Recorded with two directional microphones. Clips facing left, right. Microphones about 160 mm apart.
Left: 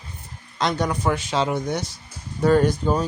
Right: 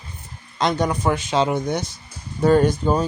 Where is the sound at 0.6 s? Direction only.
20° right (ahead or behind).